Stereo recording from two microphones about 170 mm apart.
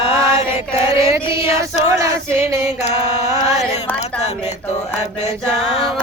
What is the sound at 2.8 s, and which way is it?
Mantra, 40° left (ahead or behind).